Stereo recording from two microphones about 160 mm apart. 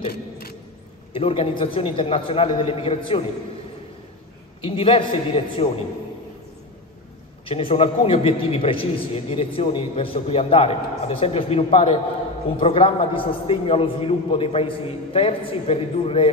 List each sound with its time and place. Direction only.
0.1 s vehicle: 75° left (ahead or behind)
1.1 s a man's voice: 35° left (ahead or behind)
4.6 s a man's voice: 35° left (ahead or behind)
7.4 s a man's voice: 35° left (ahead or behind)